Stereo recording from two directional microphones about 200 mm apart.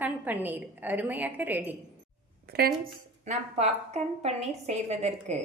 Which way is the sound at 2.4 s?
50° right (ahead or behind).